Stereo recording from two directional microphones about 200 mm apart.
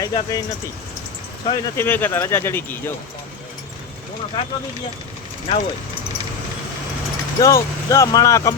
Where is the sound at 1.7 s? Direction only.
10° left (ahead or behind).